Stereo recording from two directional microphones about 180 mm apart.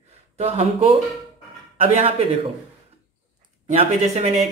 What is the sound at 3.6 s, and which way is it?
Speech, 40° right (ahead or behind).